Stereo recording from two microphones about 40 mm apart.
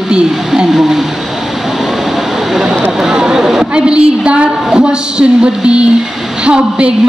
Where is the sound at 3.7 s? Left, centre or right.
Right.